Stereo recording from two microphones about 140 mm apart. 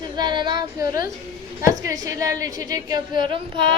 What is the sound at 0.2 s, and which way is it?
Female singing, 35° right (ahead or behind).